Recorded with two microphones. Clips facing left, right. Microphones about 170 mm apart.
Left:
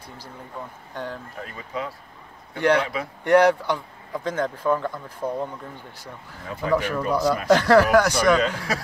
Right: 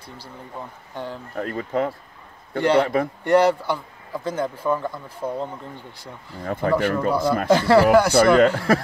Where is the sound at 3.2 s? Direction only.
10° right (ahead or behind).